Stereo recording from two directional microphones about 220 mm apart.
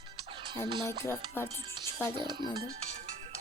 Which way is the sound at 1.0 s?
10° left (ahead or behind).